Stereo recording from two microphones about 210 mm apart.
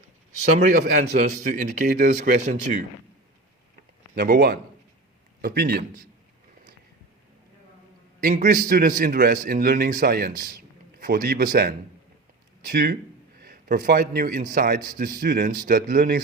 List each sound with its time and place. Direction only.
0.6 s a man's voice: 35° right (ahead or behind)
4.1 s a man's voice: 50° right (ahead or behind)
8.2 s a man's voice: 40° right (ahead or behind)
12.7 s a man's voice: 50° right (ahead or behind)